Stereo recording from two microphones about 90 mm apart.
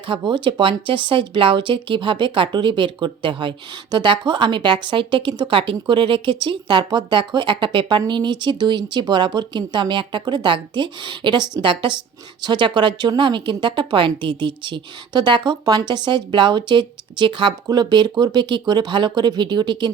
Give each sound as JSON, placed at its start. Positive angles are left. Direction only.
{"t": 0.1, "sound": "speech", "side_deg": -60}
{"t": 12.4, "sound": "speech", "side_deg": -55}
{"t": 17.7, "sound": "speech", "side_deg": -50}